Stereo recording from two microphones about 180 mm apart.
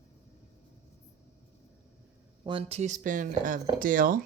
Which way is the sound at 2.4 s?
30° right (ahead or behind).